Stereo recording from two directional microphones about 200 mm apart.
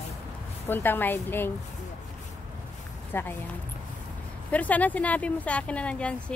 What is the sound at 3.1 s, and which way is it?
Speech, 10° left (ahead or behind).